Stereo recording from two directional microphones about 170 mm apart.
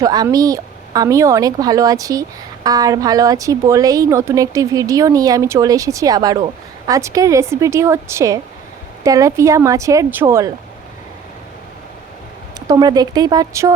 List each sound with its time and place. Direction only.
0.0 s a woman's voice: 20° right (ahead or behind)
12.5 s a woman's voice: 25° right (ahead or behind)